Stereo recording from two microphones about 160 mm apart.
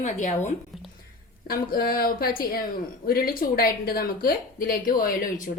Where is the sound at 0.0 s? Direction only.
50° left (ahead or behind).